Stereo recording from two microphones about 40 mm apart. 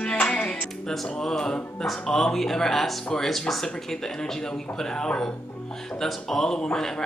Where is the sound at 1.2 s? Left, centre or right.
Centre.